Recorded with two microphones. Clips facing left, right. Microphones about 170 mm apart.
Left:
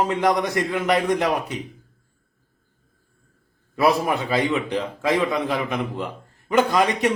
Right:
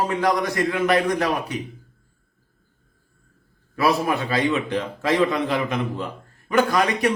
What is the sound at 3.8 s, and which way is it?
A man's voice, 20° left (ahead or behind).